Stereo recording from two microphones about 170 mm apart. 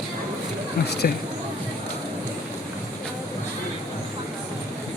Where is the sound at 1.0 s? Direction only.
55° left (ahead or behind).